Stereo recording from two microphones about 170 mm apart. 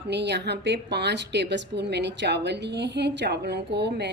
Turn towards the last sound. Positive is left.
turn(degrees=-85)